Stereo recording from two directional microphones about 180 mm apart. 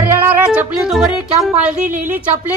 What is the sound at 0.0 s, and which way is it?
Music, 10° right (ahead or behind).